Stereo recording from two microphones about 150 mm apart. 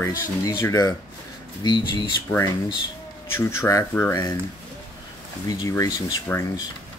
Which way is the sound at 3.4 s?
20° left (ahead or behind).